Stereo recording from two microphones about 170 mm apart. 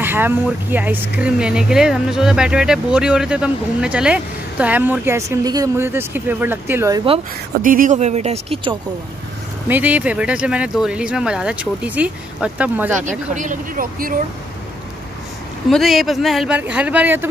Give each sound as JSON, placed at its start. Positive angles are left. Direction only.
{"t": 0.0, "sound": "speech", "side_deg": -15}
{"t": 7.6, "sound": "speech", "side_deg": -50}
{"t": 9.7, "sound": "speech", "side_deg": -10}
{"t": 13.3, "sound": "speech", "side_deg": -50}
{"t": 15.7, "sound": "speech", "side_deg": 0}